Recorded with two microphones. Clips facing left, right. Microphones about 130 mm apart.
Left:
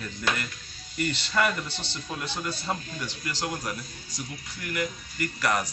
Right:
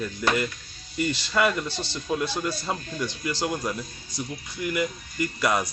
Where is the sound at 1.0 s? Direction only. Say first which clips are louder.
Right 3 dB; 15° right (ahead or behind).